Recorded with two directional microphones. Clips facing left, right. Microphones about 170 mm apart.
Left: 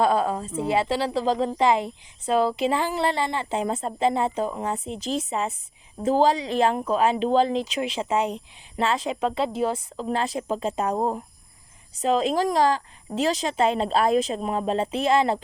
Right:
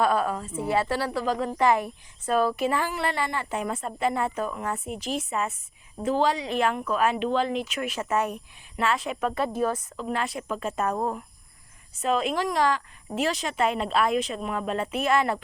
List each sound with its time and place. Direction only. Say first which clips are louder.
0.0 s a woman's voice: left 2 dB; 25° left (ahead or behind)
1.6 s a woman's voice: even; 15° left (ahead or behind)
6.1 s speech: left 4 dB; 35° left (ahead or behind)
8.0 s speech: left 1 dB; 15° left (ahead or behind)
8.7 s a woman's voice: left 2 dB; 25° left (ahead or behind)
12.0 s speech: left 4 dB; 35° left (ahead or behind)
13.1 s a woman's voice: left 2 dB; 15° right (ahead or behind)
13.4 s a woman's voice: left 3 dB; 25° left (ahead or behind)